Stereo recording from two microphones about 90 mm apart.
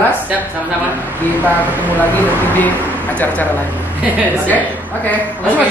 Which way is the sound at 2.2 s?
20° left (ahead or behind).